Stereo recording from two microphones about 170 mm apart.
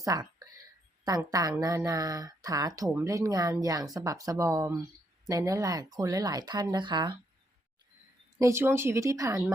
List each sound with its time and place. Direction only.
0.0 s whispering: 20° right (ahead or behind)
1.2 s speech: 20° right (ahead or behind)
8.4 s speech: 15° right (ahead or behind)